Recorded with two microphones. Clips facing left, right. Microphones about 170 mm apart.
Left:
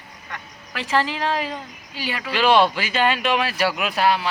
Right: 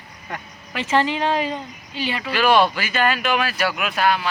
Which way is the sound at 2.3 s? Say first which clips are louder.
Even; 25° left (ahead or behind).